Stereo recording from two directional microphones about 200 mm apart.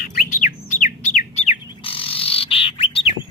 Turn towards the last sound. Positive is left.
turn(degrees=30)  # may be behind; listen again after turning